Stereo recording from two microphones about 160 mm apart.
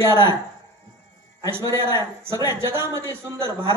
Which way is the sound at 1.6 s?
25° left (ahead or behind).